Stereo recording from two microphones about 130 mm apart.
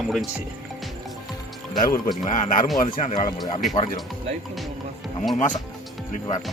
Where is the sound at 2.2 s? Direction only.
75° left (ahead or behind).